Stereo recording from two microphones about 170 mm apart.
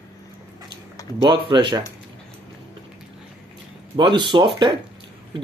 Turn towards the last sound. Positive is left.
turn(degrees=-30)  # may be behind; listen again after turning